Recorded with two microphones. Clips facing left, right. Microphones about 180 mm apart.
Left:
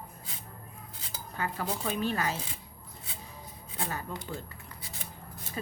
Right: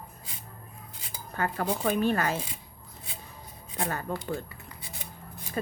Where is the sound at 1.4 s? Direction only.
55° right (ahead or behind).